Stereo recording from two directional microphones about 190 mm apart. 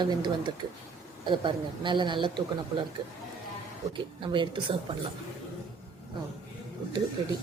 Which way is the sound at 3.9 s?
25° right (ahead or behind).